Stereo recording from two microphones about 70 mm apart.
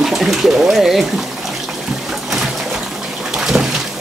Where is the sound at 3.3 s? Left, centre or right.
Centre.